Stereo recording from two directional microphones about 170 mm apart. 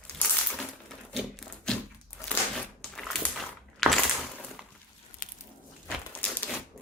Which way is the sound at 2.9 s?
5° left (ahead or behind).